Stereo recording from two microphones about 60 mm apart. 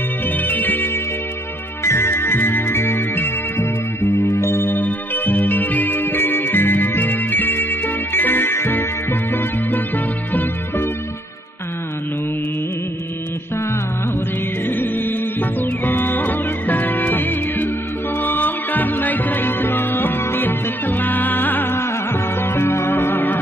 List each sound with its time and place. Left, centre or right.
0.4 s music: left
1.9 s music: left
14.7 s music: left